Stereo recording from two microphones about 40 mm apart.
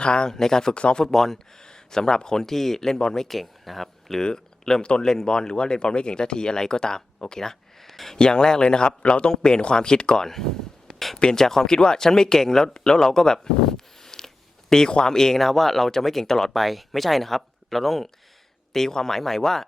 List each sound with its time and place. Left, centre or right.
0.0 s speech: left
0.8 s speech: left
1.0 s speech: centre
3.2 s speech: centre
4.2 s speech: centre
7.9 s a sound: centre
8.1 s speech: centre
10.2 s speech: centre
16.5 s speech: centre